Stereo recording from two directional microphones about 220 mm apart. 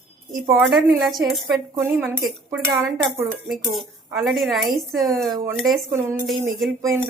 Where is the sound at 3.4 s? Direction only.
Centre (ahead or behind).